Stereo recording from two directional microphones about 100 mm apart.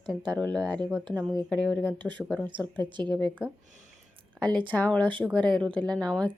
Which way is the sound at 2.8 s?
50° right (ahead or behind).